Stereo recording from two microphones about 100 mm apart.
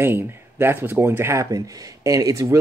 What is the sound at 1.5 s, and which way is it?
Speech, 35° right (ahead or behind).